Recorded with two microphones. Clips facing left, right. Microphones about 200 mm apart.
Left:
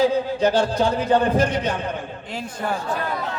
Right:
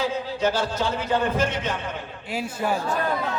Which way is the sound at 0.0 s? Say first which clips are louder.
Left 6 dB; 35° left (ahead or behind).